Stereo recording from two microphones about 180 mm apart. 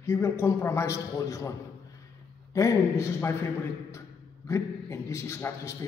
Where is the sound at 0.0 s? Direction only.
15° left (ahead or behind).